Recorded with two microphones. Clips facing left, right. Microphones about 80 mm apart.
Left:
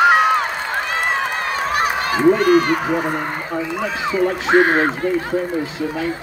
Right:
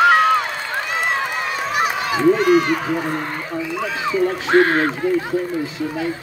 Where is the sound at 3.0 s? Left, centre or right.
Left.